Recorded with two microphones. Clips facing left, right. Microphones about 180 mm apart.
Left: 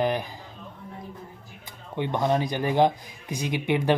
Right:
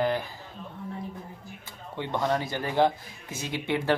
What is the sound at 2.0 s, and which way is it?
Speech, 15° left (ahead or behind).